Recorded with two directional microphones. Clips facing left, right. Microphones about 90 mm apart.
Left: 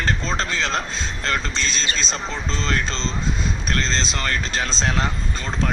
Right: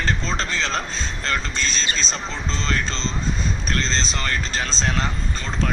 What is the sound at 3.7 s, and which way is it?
Speech, 45° left (ahead or behind).